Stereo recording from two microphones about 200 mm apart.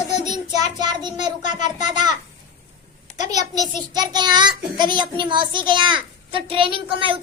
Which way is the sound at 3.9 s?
20° right (ahead or behind).